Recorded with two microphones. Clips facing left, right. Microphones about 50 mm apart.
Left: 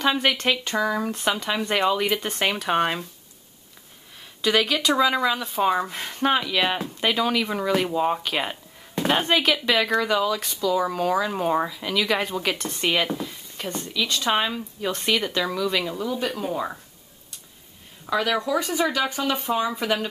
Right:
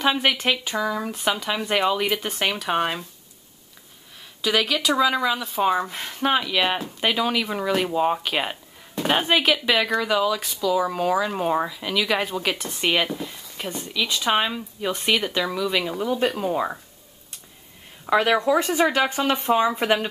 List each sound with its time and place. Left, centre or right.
0.0 s speech: centre
4.4 s speech: centre
16.0 s speech: right
16.4 s speech: centre
18.1 s speech: right
19.5 s speech: centre